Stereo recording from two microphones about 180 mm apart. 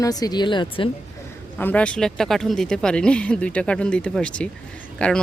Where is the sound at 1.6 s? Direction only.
10° left (ahead or behind).